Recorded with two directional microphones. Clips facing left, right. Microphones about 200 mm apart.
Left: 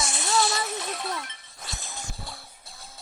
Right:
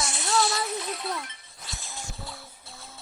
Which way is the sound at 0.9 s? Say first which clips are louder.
Even; 45° left (ahead or behind).